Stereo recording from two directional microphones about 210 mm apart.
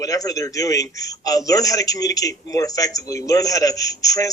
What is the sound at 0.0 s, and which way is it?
A man's voice, 15° left (ahead or behind).